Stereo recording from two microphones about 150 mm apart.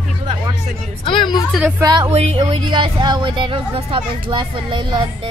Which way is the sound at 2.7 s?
30° right (ahead or behind).